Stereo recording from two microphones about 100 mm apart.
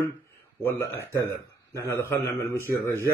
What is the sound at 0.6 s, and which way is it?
Speech, 20° left (ahead or behind).